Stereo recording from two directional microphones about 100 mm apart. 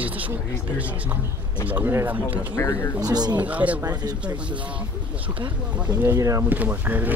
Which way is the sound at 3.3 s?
15° right (ahead or behind).